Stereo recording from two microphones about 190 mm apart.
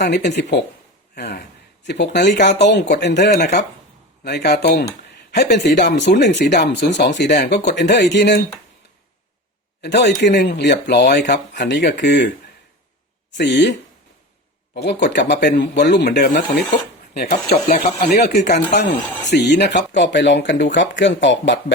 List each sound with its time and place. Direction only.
0.0 s speech: 65° left (ahead or behind)
4.2 s speech: 55° left (ahead or behind)
9.8 s speech: 60° left (ahead or behind)
13.3 s speech: 65° left (ahead or behind)